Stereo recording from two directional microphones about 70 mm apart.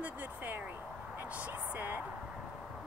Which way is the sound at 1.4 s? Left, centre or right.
Right.